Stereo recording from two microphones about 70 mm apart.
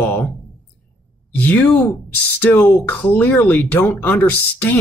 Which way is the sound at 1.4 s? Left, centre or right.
Left.